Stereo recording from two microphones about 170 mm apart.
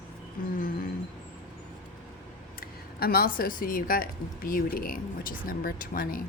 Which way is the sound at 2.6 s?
65° left (ahead or behind).